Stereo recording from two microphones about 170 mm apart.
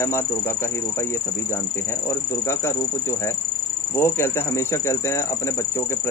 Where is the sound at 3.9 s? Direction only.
15° left (ahead or behind).